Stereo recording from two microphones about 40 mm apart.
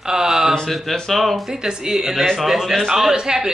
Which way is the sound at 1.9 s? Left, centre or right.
Centre.